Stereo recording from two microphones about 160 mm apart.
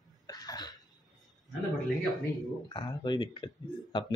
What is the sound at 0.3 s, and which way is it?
Cough, 25° left (ahead or behind).